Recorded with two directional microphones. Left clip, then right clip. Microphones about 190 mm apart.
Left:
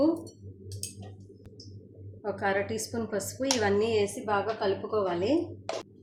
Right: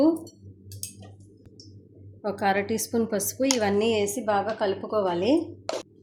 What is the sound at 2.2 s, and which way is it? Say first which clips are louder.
A woman's voice: right 4 dB; 55° right (ahead or behind).